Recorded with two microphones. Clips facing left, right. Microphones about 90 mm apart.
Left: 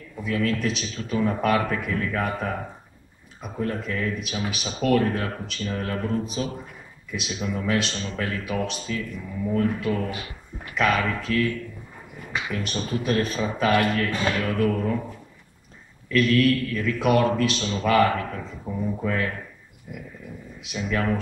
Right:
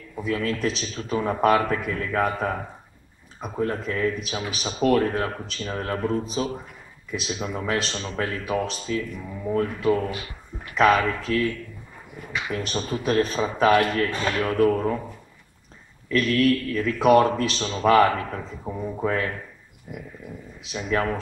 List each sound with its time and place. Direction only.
0.2 s a man's voice: 30° right (ahead or behind)
12.5 s a man's voice: 30° right (ahead or behind)
16.1 s a man's voice: 35° right (ahead or behind)
18.7 s speech: 20° right (ahead or behind)
20.6 s a man's voice: 35° right (ahead or behind)